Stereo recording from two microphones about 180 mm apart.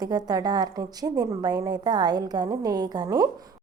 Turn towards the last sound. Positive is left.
turn(degrees=-20)  # may be behind; listen again after turning